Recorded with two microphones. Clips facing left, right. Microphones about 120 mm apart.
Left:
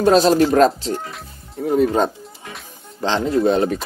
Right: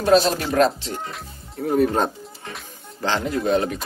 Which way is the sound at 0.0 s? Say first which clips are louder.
Left 4 dB; 40° left (ahead or behind).